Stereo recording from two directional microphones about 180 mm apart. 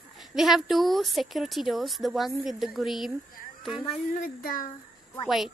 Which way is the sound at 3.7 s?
30° left (ahead or behind).